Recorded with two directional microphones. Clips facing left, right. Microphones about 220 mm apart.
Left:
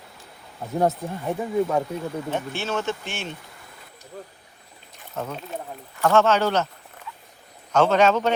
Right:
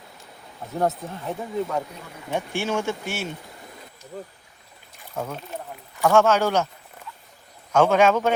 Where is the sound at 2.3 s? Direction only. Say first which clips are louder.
Right 5 dB; 10° right (ahead or behind).